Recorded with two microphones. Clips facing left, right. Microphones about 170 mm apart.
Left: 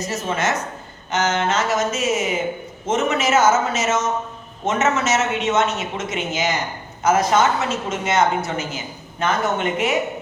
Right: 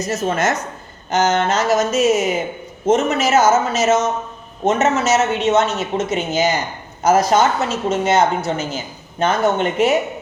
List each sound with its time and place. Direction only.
0.1 s speech: 40° right (ahead or behind)